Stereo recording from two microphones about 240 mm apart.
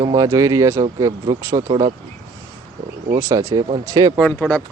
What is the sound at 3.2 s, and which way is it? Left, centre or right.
Speech, centre.